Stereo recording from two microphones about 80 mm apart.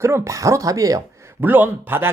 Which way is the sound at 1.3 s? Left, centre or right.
Right.